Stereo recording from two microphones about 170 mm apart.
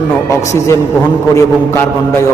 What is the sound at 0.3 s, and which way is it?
A man's voice, 15° left (ahead or behind).